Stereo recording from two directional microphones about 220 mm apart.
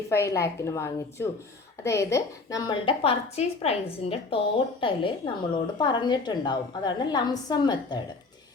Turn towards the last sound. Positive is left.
turn(degrees=20)  # may be behind; listen again after turning